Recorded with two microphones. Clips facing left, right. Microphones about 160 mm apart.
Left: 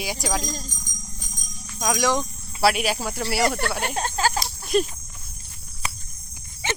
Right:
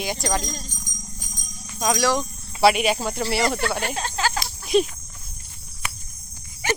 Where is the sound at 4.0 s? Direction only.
45° left (ahead or behind).